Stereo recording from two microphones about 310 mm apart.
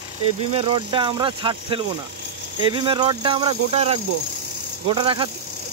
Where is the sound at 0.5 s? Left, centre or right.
Centre.